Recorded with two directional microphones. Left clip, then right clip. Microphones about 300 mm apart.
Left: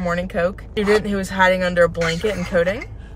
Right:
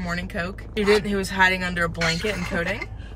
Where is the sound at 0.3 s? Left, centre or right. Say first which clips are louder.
Left 9 dB; centre.